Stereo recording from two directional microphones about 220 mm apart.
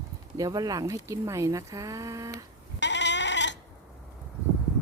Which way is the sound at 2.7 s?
55° left (ahead or behind).